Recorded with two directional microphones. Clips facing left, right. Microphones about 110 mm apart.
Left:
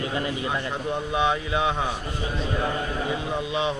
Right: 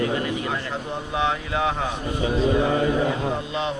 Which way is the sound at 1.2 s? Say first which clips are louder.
Right 1 dB; 15° left (ahead or behind).